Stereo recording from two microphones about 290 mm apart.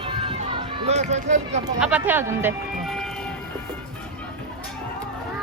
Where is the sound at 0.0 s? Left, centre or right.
Centre.